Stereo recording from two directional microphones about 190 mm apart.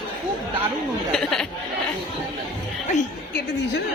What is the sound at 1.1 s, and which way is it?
Speech, 5° left (ahead or behind).